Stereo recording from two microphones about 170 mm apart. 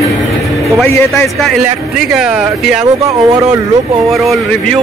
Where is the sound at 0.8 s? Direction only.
15° left (ahead or behind).